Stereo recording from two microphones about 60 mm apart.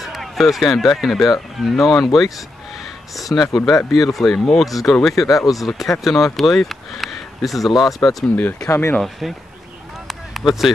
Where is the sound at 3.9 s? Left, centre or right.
Centre.